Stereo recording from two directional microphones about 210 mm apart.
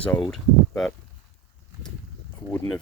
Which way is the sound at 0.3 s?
5° left (ahead or behind).